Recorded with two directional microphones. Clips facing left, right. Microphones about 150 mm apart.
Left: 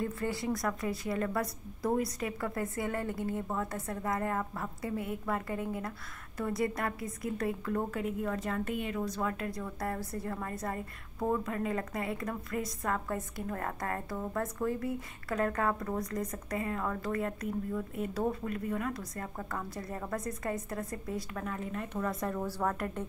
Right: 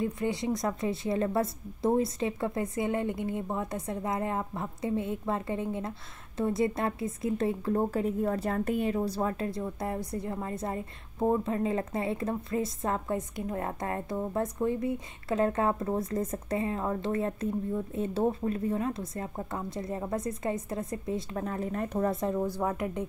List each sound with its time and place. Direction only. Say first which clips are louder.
0.0 s a woman's voice: right 4 dB; 20° right (ahead or behind); by 22.1 s 40° right (ahead or behind)
22.1 s a woman's voice: right 5 dB; 20° right (ahead or behind)